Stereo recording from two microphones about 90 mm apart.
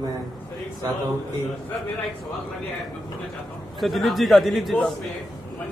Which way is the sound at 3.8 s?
Centre (ahead or behind).